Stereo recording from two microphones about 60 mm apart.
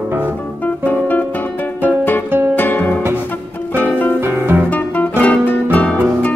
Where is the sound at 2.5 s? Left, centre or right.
Left.